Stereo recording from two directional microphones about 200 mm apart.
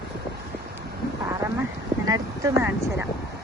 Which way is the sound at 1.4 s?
10° right (ahead or behind).